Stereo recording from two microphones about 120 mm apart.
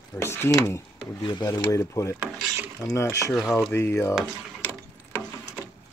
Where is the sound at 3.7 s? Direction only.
20° left (ahead or behind).